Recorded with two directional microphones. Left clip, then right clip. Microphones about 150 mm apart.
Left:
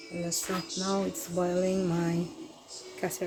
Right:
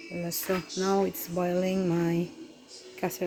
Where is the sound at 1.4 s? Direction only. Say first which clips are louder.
Even; 30° right (ahead or behind).